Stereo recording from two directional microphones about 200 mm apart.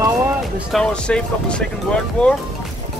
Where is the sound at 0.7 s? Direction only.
5° left (ahead or behind).